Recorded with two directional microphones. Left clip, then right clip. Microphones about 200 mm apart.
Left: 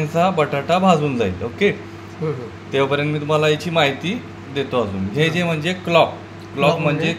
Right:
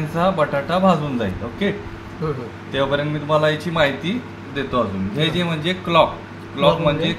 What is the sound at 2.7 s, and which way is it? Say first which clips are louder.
A man's voice: left 2 dB; 40° left (ahead or behind).